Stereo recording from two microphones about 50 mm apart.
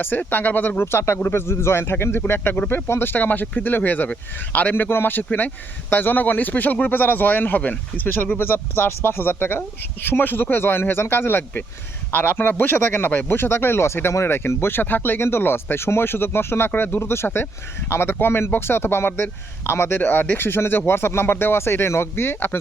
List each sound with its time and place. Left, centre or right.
0.0 s speech: left
0.9 s speech: left
4.7 s speech: left
8.4 s speech: left
12.1 s speech: left
13.8 s speech: left
20.0 s speech: left